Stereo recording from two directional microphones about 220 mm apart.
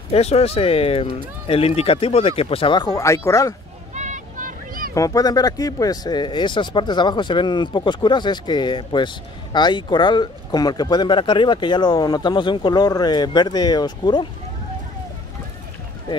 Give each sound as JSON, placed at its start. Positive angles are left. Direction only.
{"t": 0.1, "sound": "speech", "side_deg": 30}
{"t": 3.9, "sound": "a sound", "side_deg": -35}
{"t": 4.9, "sound": "speech", "side_deg": 15}